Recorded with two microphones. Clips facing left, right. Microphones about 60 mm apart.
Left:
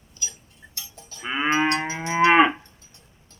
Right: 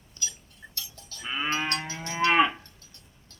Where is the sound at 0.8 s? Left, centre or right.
Left.